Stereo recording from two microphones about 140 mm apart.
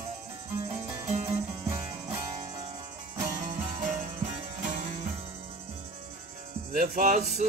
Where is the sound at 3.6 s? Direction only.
65° right (ahead or behind).